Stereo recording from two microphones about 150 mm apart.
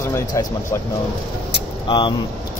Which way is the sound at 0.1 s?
25° left (ahead or behind).